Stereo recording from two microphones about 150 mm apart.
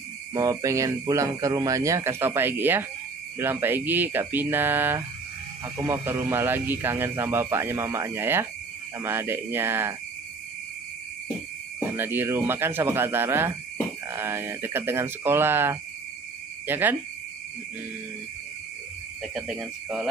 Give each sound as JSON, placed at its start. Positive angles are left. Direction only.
{"t": 0.3, "sound": "speech", "side_deg": -25}
{"t": 12.0, "sound": "speech", "side_deg": -15}
{"t": 19.2, "sound": "speech", "side_deg": 0}